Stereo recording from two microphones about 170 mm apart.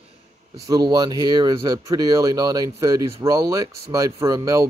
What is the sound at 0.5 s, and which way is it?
Speech, 25° right (ahead or behind).